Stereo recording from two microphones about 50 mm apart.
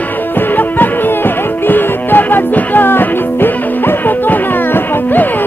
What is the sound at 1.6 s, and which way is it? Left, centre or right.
Music, left.